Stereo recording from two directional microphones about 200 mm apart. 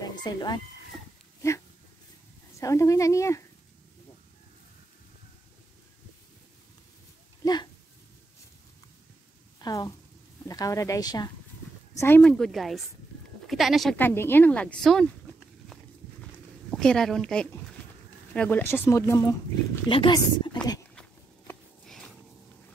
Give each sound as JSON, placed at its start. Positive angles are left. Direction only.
{"t": 0.0, "sound": "speech", "side_deg": 20}
{"t": 2.6, "sound": "speech", "side_deg": 15}
{"t": 7.4, "sound": "a sound", "side_deg": 20}
{"t": 9.6, "sound": "a woman's voice", "side_deg": 20}
{"t": 12.0, "sound": "speech", "side_deg": 10}
{"t": 16.7, "sound": "speech", "side_deg": 5}
{"t": 20.9, "sound": "walk", "side_deg": 5}